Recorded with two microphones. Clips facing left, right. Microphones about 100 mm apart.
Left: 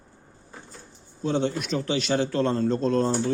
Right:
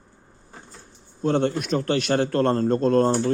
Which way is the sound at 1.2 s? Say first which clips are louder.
Right 3 dB; 55° right (ahead or behind).